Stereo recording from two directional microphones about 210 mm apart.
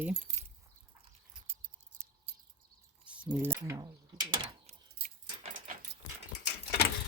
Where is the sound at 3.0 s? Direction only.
5° right (ahead or behind); by 4.7 s 25° right (ahead or behind).